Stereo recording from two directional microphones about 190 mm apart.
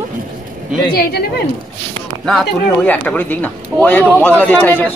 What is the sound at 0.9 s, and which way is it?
Speech, 55° left (ahead or behind).